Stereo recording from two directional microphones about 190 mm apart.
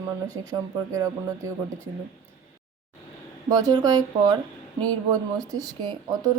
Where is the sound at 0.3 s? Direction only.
20° right (ahead or behind).